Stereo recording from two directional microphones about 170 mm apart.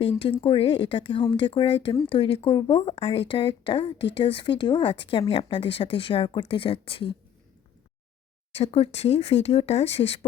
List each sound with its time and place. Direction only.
0.0 s speech: 35° left (ahead or behind)
8.5 s speech: 35° left (ahead or behind)